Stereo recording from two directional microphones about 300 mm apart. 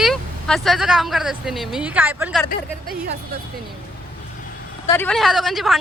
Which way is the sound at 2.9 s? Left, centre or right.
Right.